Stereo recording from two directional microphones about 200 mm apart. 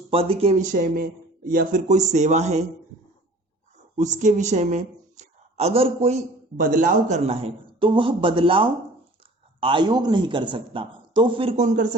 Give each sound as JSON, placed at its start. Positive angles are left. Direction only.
{"t": 0.1, "sound": "speech", "side_deg": -30}
{"t": 4.2, "sound": "a woman's voice", "side_deg": -35}
{"t": 6.6, "sound": "speech", "side_deg": -40}